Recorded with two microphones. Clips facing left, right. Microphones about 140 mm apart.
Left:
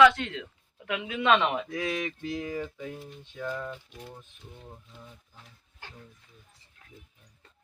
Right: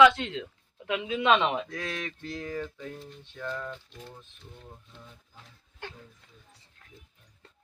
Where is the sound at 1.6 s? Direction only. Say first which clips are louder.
Left 5 dB; 5° left (ahead or behind).